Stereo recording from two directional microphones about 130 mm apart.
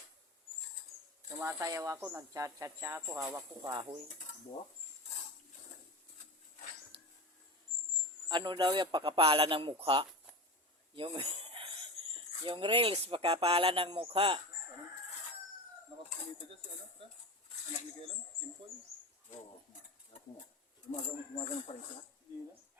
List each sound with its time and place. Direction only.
1.4 s speech: 20° right (ahead or behind); by 4.0 s 40° right (ahead or behind)
8.3 s a man's voice: 35° right (ahead or behind)
21.3 s speech: 50° left (ahead or behind)